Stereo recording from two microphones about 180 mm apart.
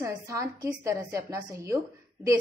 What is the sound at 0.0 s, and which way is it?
A woman's voice, 15° right (ahead or behind).